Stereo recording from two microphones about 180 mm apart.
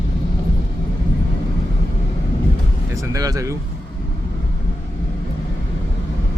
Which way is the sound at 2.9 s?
15° right (ahead or behind).